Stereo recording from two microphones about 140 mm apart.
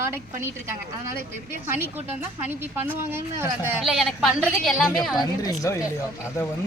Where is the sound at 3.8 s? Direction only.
Centre (ahead or behind).